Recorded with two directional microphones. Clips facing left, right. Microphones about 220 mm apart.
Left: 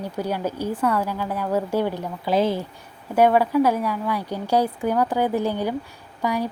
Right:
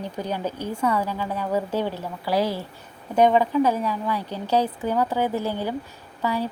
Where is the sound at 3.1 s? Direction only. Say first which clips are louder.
Left 1 dB; 10° left (ahead or behind).